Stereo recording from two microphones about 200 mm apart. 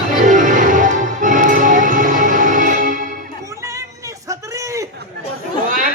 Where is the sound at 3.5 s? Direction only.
15° right (ahead or behind).